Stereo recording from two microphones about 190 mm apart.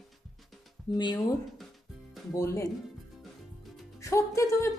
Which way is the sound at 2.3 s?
15° left (ahead or behind).